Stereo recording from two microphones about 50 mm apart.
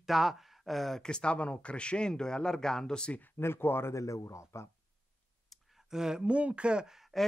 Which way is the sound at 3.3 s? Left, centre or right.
Left.